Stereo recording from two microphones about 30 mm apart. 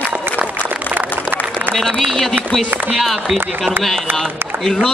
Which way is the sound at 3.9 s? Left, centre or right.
Centre.